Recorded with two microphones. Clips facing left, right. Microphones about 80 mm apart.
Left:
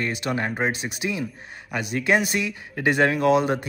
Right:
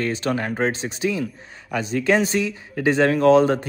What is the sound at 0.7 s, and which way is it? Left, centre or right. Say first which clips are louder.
Speech: right 3 dB; right.